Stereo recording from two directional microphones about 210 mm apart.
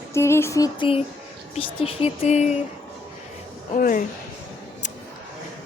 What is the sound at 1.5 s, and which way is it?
Speech, 25° left (ahead or behind).